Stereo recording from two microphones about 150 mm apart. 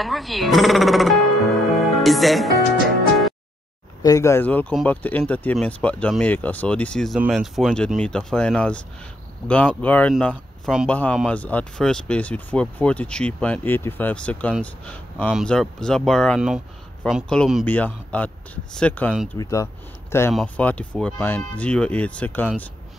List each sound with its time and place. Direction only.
0.0 s speech: centre (ahead or behind)
4.0 s speech: 20° left (ahead or behind)
10.3 s speech: 5° right (ahead or behind)
10.9 s speech: 10° left (ahead or behind)
19.3 s speech: 25° left (ahead or behind)